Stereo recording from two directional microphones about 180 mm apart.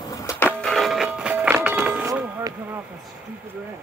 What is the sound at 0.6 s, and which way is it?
Music, centre (ahead or behind).